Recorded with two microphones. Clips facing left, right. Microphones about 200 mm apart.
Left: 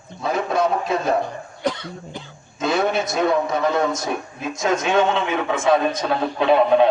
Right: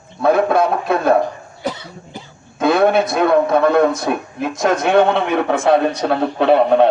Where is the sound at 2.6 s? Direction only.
60° right (ahead or behind).